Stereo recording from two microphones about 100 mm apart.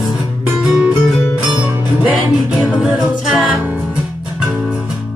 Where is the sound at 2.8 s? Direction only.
5° right (ahead or behind).